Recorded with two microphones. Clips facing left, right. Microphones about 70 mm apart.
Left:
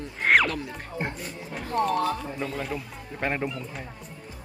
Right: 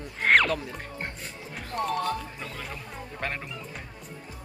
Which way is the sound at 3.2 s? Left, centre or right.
Centre.